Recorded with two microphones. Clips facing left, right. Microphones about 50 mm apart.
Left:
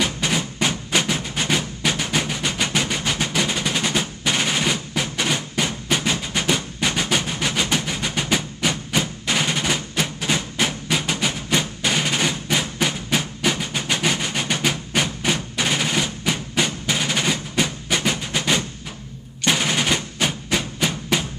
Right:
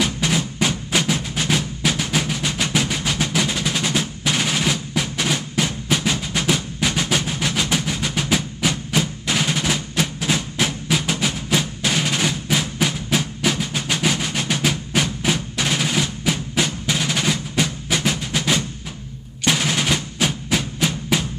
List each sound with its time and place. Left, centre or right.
0.0 s percussion: centre